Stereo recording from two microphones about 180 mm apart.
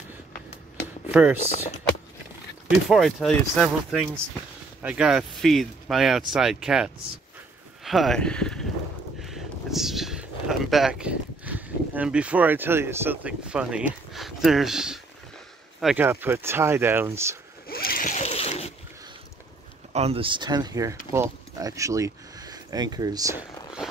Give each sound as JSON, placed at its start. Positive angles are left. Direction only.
{"t": 1.0, "sound": "speech", "side_deg": -10}
{"t": 2.9, "sound": "speech", "side_deg": 0}
{"t": 9.2, "sound": "a sound", "side_deg": 0}
{"t": 15.8, "sound": "speech", "side_deg": 0}
{"t": 17.6, "sound": "splash", "side_deg": 55}
{"t": 19.9, "sound": "speech", "side_deg": -35}
{"t": 23.8, "sound": "a sound", "side_deg": -5}